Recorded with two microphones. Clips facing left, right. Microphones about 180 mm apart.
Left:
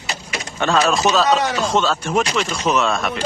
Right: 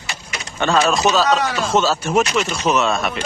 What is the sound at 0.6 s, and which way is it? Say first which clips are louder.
Speech: right 1 dB; centre (ahead or behind).